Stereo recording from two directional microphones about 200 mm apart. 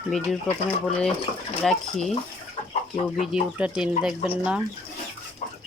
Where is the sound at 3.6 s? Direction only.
5° right (ahead or behind).